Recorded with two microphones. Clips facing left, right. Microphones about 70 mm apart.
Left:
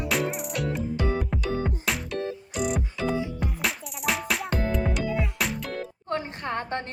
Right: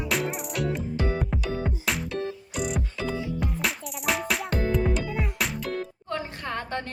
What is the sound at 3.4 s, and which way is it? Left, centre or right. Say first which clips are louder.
Music: right 1 dB; centre.